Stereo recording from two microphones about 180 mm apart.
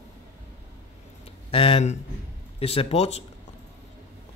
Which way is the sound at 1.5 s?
30° left (ahead or behind).